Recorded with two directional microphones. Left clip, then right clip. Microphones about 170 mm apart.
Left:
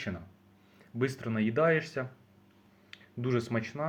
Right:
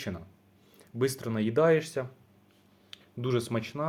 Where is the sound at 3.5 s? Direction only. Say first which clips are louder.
Right 1 dB; 25° right (ahead or behind).